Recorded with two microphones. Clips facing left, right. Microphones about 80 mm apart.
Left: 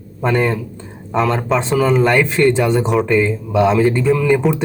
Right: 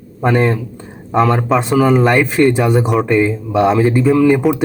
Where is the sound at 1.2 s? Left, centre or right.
Centre.